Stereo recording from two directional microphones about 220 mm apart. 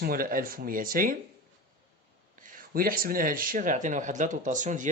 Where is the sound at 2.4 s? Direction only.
40° right (ahead or behind).